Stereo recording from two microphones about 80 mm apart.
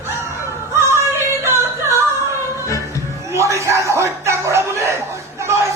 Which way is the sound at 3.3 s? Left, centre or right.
Right.